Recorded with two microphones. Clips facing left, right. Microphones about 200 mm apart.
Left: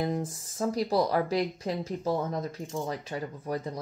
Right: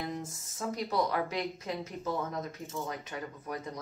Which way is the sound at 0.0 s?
35° left (ahead or behind).